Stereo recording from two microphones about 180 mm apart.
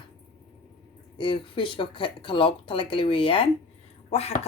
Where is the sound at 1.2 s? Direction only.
30° left (ahead or behind).